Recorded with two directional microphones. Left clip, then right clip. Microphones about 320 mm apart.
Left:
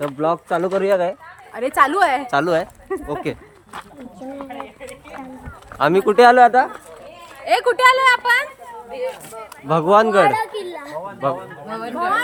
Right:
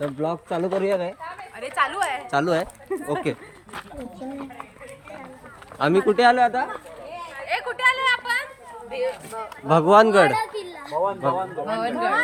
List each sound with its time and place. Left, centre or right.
0.0 s a woman's voice: centre
2.3 s speech: centre
5.8 s speech: centre
8.9 s speech: centre
10.3 s speech: centre
11.7 s speech: centre